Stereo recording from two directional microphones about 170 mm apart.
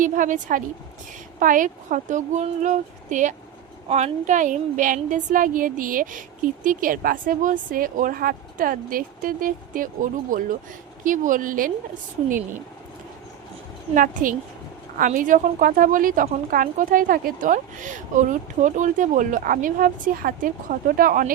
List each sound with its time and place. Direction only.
0.0 s speech: 50° right (ahead or behind)
13.9 s speech: 50° right (ahead or behind)